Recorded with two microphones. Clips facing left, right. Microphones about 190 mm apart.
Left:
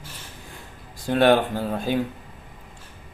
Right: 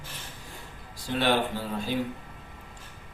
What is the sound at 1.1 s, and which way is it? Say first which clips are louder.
Speech: left 8 dB; 50° left (ahead or behind).